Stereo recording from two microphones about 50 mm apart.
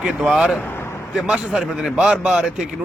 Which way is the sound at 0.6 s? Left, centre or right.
Left.